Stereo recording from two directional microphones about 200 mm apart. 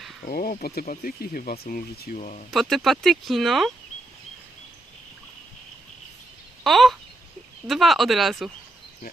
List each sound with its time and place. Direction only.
0.3 s speech: 50° left (ahead or behind)
2.1 s speech: 35° left (ahead or behind)
2.5 s speech: centre (ahead or behind)
6.7 s speech: centre (ahead or behind)